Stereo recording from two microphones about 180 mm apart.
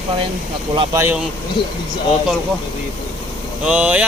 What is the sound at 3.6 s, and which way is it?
Speech, 5° right (ahead or behind).